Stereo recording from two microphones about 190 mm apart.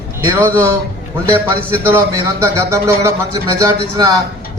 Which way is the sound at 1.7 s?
10° right (ahead or behind).